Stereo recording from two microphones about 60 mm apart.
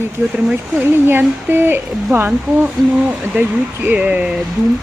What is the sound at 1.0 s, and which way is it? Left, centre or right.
Speech, right.